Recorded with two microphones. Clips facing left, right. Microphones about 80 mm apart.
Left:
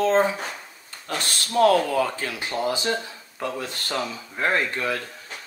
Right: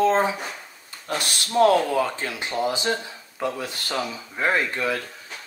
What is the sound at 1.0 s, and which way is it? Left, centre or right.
Speech, right.